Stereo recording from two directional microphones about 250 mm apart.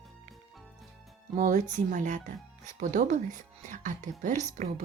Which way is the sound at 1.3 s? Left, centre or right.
Right.